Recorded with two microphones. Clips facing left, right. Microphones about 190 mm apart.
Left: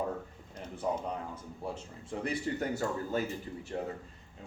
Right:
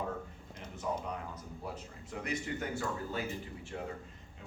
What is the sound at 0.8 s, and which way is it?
Speech, 35° left (ahead or behind).